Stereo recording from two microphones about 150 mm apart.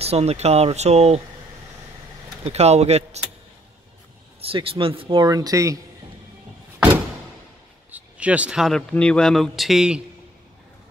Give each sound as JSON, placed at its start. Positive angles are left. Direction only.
{"t": 0.0, "sound": "speech", "side_deg": -45}
{"t": 2.4, "sound": "speech", "side_deg": -45}
{"t": 4.4, "sound": "speech", "side_deg": -40}
{"t": 7.9, "sound": "speech", "side_deg": -10}